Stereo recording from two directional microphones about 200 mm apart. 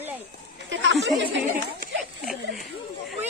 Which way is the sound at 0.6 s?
70° right (ahead or behind).